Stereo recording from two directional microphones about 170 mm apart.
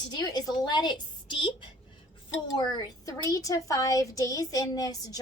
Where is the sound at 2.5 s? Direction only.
25° left (ahead or behind).